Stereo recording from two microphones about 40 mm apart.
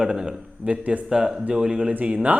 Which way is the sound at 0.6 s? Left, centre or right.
Right.